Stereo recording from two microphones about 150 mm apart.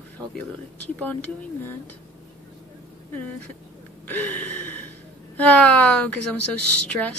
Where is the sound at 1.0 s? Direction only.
10° left (ahead or behind).